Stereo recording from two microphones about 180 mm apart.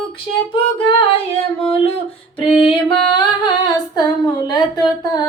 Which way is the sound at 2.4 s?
30° left (ahead or behind).